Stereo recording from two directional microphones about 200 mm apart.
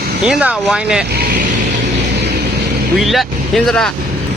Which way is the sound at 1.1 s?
50° right (ahead or behind).